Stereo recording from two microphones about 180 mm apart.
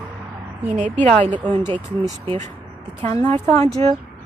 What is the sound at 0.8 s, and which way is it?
Speech, 45° right (ahead or behind).